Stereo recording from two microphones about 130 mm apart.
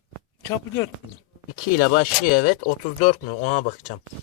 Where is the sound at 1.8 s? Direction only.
90° left; by 3.7 s 70° left (ahead or behind).